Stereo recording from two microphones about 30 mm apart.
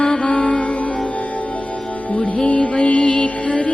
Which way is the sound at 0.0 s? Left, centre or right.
Left.